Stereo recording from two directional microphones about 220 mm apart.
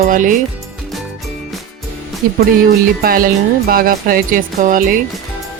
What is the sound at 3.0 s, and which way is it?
Music, 40° right (ahead or behind).